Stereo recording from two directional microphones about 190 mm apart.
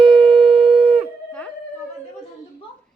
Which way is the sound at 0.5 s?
30° right (ahead or behind).